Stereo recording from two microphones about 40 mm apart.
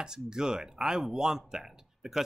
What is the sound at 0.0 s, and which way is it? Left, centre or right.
Speech, centre.